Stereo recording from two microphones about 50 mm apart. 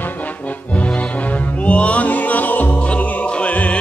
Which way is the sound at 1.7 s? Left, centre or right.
Left.